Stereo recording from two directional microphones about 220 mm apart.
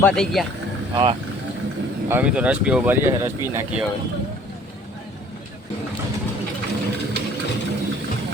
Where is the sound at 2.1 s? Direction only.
5° right (ahead or behind).